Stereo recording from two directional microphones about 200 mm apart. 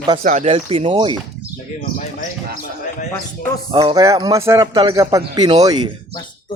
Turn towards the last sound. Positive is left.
turn(degrees=-20)  # may be behind; listen again after turning